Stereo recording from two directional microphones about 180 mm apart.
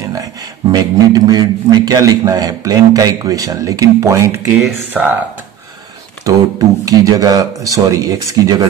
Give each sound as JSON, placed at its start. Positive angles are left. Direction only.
{"t": 0.1, "sound": "a man's voice", "side_deg": -20}
{"t": 4.6, "sound": "speech", "side_deg": -5}
{"t": 6.3, "sound": "a man's voice", "side_deg": -20}